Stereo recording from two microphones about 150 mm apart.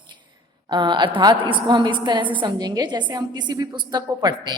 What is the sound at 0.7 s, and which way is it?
A woman's voice, 30° right (ahead or behind).